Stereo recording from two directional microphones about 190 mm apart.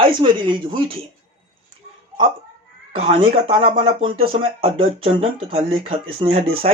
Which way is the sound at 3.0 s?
30° right (ahead or behind).